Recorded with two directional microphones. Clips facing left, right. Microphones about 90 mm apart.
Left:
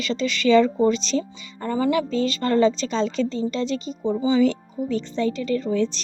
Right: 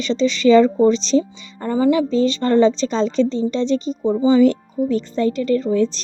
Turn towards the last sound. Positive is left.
turn(degrees=-40)  # may be behind; listen again after turning